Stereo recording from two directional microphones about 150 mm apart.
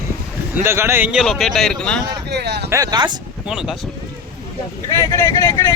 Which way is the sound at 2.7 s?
25° right (ahead or behind).